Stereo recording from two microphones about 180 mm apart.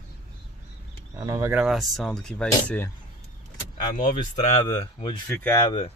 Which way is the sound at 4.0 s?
40° left (ahead or behind).